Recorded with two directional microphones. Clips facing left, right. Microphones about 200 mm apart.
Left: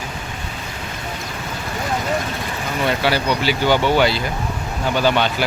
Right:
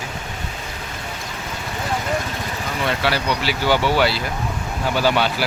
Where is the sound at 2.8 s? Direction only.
Centre (ahead or behind).